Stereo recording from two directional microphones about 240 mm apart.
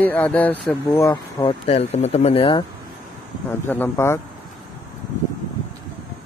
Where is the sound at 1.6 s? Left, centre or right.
Left.